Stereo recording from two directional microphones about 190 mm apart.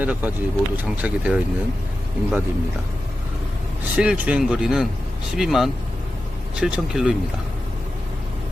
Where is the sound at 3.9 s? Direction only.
5° right (ahead or behind).